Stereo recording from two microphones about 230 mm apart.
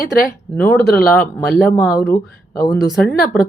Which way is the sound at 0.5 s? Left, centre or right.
Centre.